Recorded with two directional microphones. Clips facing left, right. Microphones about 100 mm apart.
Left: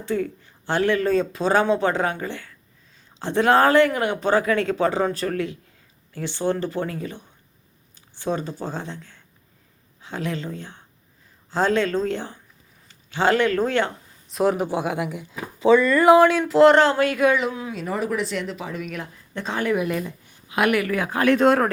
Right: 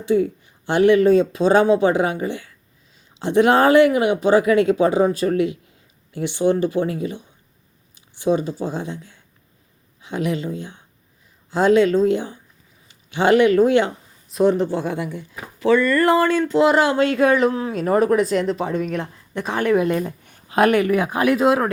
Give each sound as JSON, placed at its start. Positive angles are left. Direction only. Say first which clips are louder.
{"t": 0.0, "sound": "speech", "louder": "right 7 dB", "side_deg": -15}
{"t": 10.0, "sound": "speech", "louder": "right 5 dB", "side_deg": -15}
{"t": 14.3, "sound": "speech", "louder": "right 4 dB", "side_deg": 0}
{"t": 17.0, "sound": "speech", "louder": "right 3 dB", "side_deg": -25}
{"t": 19.3, "sound": "speech", "louder": "right 5 dB", "side_deg": -15}
{"t": 20.1, "sound": "a sound", "louder": "right 4 dB", "side_deg": -55}
{"t": 20.5, "sound": "speech", "louder": "right 5 dB", "side_deg": -35}
{"t": 21.3, "sound": "speech", "louder": "left 1 dB", "side_deg": -5}